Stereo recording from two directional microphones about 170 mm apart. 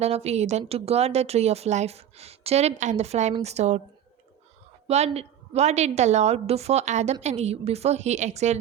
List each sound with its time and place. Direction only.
0.0 s a woman's voice: 40° right (ahead or behind)
4.9 s a woman's voice: 40° right (ahead or behind)